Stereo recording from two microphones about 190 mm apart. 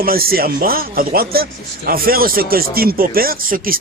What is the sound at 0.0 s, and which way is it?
Speech, 50° right (ahead or behind).